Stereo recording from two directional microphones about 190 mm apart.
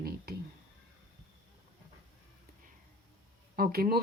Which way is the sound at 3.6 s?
50° right (ahead or behind).